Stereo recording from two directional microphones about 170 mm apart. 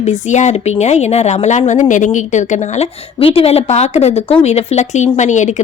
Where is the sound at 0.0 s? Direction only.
40° left (ahead or behind).